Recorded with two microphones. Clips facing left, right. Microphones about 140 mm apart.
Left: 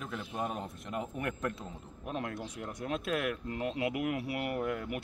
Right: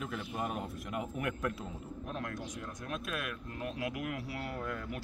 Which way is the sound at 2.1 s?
25° left (ahead or behind).